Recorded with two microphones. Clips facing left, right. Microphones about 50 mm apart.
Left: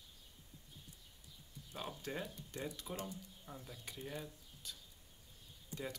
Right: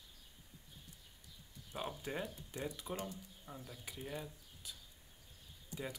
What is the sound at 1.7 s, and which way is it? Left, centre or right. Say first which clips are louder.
Speech: right 2 dB; centre.